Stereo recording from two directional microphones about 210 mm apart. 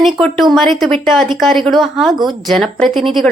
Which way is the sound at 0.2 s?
Centre (ahead or behind).